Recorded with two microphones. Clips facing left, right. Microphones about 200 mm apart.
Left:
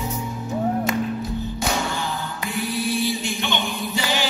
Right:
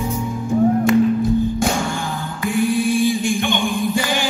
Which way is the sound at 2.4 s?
50° right (ahead or behind).